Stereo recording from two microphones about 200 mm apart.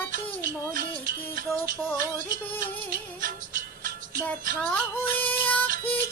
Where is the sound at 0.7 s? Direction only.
45° right (ahead or behind).